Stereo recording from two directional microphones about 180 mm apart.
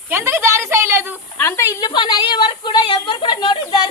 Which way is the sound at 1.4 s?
15° left (ahead or behind).